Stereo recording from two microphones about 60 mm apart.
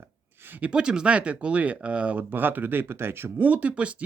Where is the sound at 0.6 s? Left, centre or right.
Centre.